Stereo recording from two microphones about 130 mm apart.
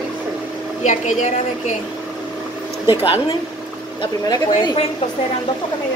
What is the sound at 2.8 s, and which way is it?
Speech, 45° left (ahead or behind).